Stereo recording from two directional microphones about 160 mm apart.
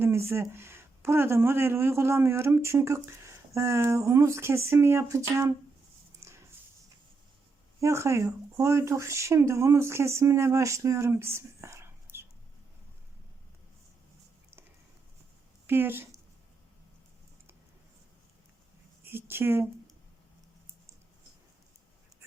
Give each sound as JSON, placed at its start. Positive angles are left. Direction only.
{"t": 0.0, "sound": "speech", "side_deg": -15}
{"t": 7.8, "sound": "speech", "side_deg": -15}
{"t": 12.1, "sound": "a sound", "side_deg": -60}
{"t": 15.6, "sound": "speech", "side_deg": -15}
{"t": 19.0, "sound": "speech", "side_deg": -15}